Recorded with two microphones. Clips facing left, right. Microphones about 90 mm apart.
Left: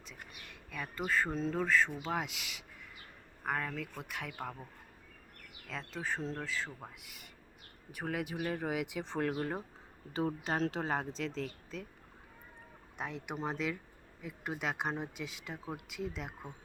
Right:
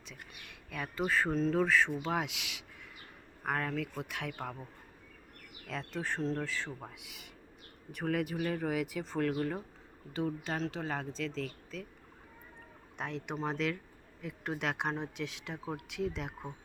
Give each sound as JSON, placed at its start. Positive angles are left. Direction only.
{"t": 0.7, "sound": "speech", "side_deg": -5}
{"t": 5.6, "sound": "speech", "side_deg": 0}
{"t": 8.1, "sound": "speech", "side_deg": 15}
{"t": 13.0, "sound": "speech", "side_deg": 5}